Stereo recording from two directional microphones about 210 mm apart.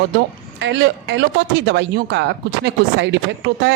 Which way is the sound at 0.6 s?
60° right (ahead or behind).